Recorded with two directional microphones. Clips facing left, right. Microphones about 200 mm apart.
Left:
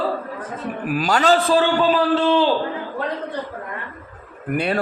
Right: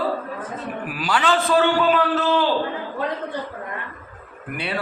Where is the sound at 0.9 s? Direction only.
45° left (ahead or behind).